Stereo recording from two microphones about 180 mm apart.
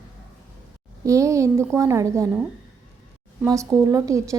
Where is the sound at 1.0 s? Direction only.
15° right (ahead or behind).